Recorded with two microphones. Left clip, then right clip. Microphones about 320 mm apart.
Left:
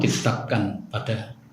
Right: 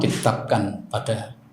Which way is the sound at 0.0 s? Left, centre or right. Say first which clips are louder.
Right 2 dB; centre.